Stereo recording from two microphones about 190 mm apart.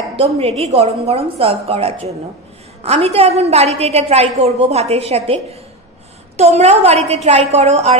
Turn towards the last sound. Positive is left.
turn(degrees=-35)  # may be behind; listen again after turning